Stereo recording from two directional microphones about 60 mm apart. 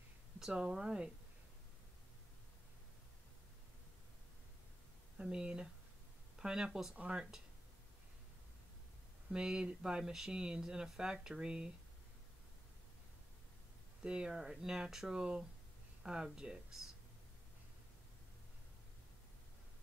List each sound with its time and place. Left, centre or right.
0.4 s speech: centre
5.1 s speech: centre
7.0 s speech: centre
9.3 s speech: centre
14.0 s speech: centre